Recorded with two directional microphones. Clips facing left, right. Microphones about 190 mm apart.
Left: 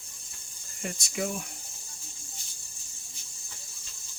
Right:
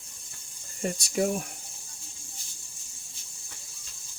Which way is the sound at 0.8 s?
35° right (ahead or behind).